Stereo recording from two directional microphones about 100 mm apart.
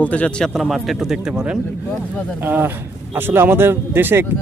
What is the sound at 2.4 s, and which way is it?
Speech, 20° right (ahead or behind).